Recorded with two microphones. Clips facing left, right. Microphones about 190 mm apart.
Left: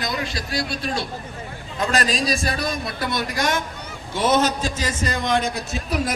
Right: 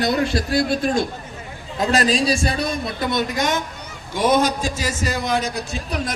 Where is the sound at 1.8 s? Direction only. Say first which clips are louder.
Right 4 dB; 35° right (ahead or behind).